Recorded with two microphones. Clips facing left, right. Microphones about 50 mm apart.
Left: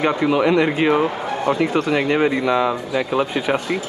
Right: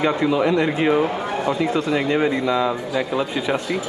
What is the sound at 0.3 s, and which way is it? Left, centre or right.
Speech, left.